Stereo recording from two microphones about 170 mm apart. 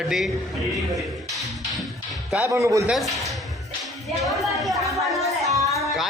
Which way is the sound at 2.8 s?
Centre (ahead or behind).